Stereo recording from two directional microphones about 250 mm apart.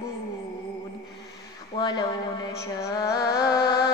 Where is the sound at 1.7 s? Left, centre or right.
Centre.